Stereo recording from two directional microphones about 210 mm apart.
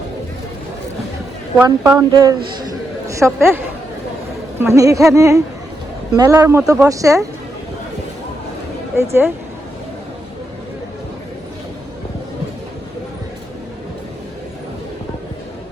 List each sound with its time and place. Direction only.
1.6 s a woman's voice: 15° right (ahead or behind)
4.6 s speech: 15° right (ahead or behind)
9.0 s speech: 10° right (ahead or behind)